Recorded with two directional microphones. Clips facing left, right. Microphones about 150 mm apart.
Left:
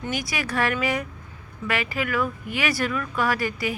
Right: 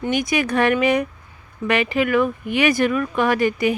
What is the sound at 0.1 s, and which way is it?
A woman's voice, 20° right (ahead or behind).